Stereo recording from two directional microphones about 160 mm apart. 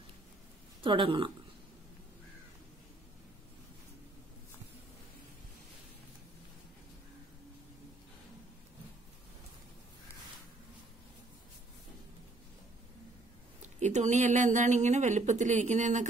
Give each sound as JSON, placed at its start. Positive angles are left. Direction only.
{"t": 0.8, "sound": "speech", "side_deg": -30}
{"t": 13.6, "sound": "speech", "side_deg": -45}